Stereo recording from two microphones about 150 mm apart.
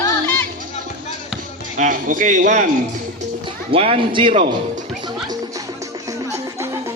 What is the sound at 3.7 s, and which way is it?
Speech, 40° right (ahead or behind).